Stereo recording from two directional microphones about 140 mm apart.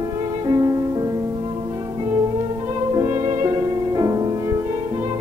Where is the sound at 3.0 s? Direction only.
20° right (ahead or behind).